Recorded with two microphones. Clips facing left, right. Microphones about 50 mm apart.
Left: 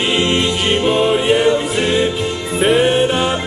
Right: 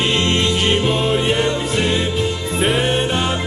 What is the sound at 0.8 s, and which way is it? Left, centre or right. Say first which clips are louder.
Music: left 3 dB; centre.